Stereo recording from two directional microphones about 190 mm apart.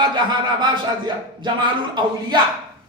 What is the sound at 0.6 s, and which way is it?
Speech, 25° right (ahead or behind).